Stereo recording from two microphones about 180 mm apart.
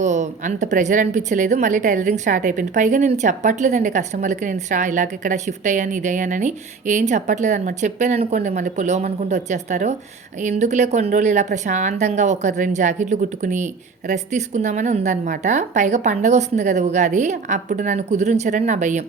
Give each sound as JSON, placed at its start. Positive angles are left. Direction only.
{"t": 0.0, "sound": "a woman's voice", "side_deg": -40}